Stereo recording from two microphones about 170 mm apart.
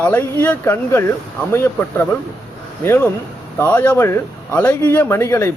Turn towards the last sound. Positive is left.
turn(degrees=15)  # may be behind; listen again after turning